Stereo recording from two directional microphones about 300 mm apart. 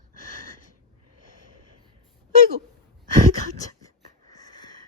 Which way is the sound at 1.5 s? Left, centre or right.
Left.